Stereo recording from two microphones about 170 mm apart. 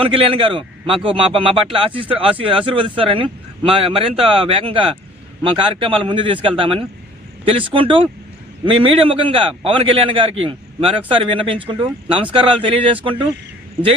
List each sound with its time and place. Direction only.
0.0 s a man's voice: 30° right (ahead or behind)